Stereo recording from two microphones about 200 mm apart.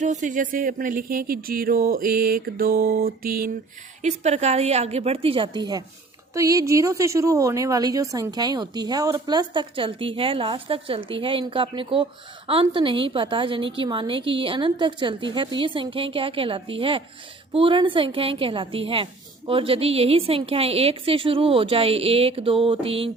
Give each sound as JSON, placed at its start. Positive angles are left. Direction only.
{"t": 0.0, "sound": "music", "side_deg": -40}
{"t": 4.0, "sound": "a woman's voice", "side_deg": -35}